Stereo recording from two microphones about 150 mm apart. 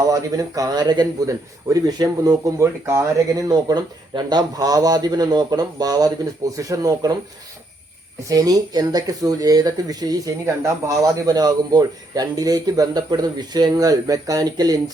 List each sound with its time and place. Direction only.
0.1 s speech: 25° right (ahead or behind)
8.3 s speech: 25° right (ahead or behind)